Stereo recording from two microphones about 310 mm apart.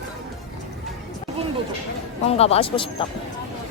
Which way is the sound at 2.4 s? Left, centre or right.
Centre.